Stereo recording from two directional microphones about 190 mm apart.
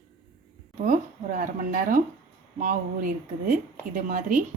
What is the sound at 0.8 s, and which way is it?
A woman's voice, 45° right (ahead or behind).